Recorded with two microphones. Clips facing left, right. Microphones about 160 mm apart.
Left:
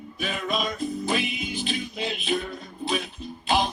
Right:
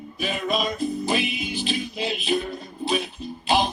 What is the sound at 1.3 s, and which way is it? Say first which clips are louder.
Music: right 2 dB; 90° right.